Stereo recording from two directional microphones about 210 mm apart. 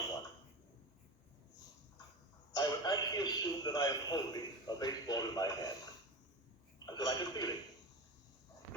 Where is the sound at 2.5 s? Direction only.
20° left (ahead or behind).